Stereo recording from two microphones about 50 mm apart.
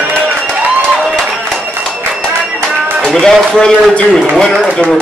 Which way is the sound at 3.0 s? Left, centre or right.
Centre.